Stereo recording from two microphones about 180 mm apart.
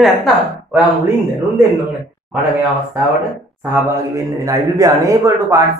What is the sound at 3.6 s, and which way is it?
Speech, 15° right (ahead or behind).